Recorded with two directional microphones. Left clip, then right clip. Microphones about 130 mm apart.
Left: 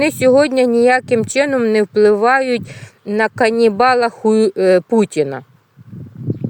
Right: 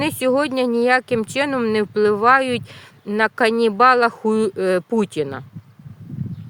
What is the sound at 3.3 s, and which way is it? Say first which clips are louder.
Speech: left 4 dB; 30° left (ahead or behind).